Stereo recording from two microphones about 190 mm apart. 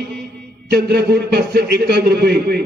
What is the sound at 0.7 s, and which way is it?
A man's voice, 55° right (ahead or behind).